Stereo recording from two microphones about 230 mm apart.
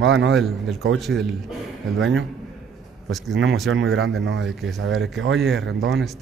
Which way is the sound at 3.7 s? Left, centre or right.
Right.